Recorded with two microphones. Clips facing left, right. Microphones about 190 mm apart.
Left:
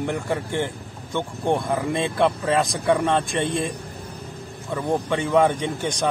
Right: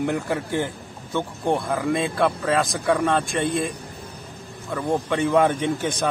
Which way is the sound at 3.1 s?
Centre (ahead or behind).